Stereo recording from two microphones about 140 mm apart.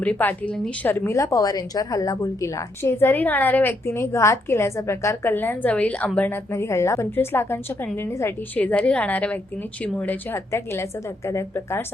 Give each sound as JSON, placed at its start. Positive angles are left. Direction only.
{"t": 0.0, "sound": "a woman's voice", "side_deg": 10}